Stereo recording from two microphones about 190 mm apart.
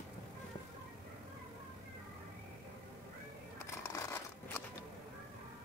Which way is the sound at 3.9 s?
15° left (ahead or behind).